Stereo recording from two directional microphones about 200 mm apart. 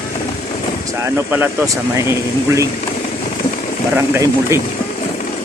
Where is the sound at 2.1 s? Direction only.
15° right (ahead or behind).